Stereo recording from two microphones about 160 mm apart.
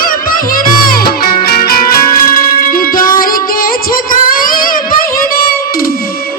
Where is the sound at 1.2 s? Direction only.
75° left (ahead or behind).